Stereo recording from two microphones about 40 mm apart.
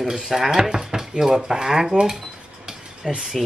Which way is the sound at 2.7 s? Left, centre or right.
Centre.